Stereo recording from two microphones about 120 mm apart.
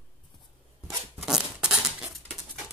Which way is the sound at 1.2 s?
5° right (ahead or behind).